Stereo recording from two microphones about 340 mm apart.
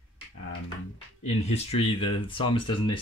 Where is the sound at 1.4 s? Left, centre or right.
Centre.